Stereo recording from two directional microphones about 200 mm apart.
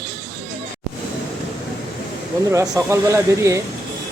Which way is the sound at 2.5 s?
15° right (ahead or behind).